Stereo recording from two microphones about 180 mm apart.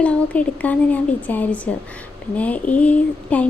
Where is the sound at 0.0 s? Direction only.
5° left (ahead or behind).